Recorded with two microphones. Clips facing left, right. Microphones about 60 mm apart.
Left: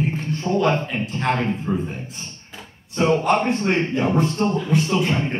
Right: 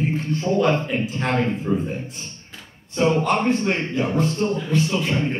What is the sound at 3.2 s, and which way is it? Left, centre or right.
A man's voice, left.